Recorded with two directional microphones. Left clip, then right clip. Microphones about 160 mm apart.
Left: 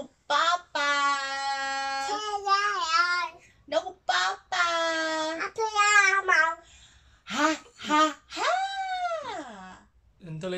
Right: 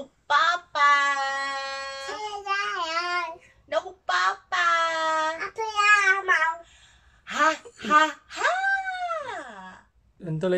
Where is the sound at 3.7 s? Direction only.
10° left (ahead or behind).